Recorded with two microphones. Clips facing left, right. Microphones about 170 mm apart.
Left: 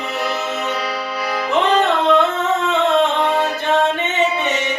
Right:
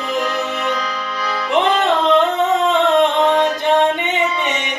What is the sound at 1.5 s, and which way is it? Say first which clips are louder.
Music: right 1 dB; 15° right (ahead or behind).